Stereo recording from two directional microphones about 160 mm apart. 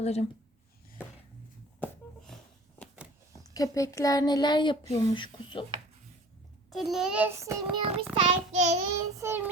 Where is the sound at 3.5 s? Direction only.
20° left (ahead or behind).